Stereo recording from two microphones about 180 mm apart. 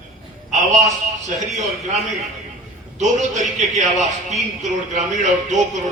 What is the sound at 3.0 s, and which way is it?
A man's voice, 40° right (ahead or behind).